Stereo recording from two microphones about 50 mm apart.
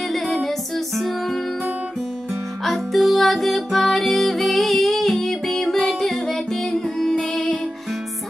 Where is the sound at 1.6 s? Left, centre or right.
Right.